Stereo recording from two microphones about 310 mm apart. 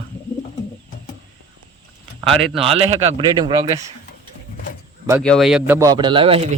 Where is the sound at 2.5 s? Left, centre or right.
Centre.